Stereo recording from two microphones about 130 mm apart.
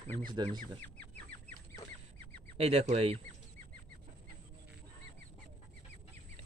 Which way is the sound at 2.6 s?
50° right (ahead or behind).